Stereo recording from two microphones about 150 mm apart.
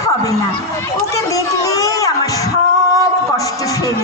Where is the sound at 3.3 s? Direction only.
20° left (ahead or behind).